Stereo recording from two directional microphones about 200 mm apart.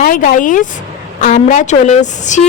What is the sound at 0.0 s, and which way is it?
Speech, 45° left (ahead or behind).